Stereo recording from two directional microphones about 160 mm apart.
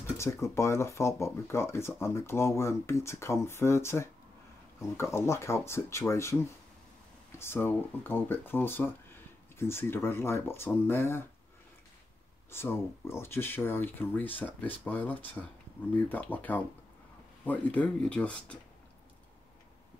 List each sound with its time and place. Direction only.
0.2 s speech: 15° left (ahead or behind)
7.3 s speech: 15° left (ahead or behind)
12.4 s speech: 15° left (ahead or behind)